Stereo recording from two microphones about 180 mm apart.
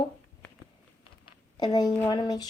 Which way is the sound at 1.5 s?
20° left (ahead or behind).